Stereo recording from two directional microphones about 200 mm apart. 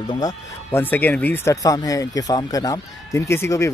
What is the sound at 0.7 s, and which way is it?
Speech, 10° left (ahead or behind).